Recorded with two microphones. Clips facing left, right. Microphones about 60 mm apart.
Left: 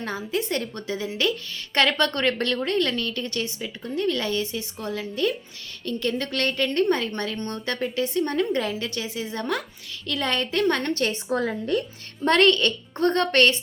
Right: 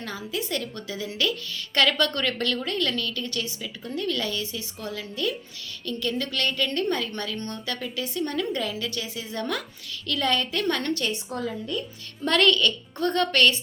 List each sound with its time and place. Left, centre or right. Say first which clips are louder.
0.0 s a woman's voice: left 4 dB; left
11.3 s a woman's voice: left 6 dB; left
12.2 s a woman's voice: left 3 dB; left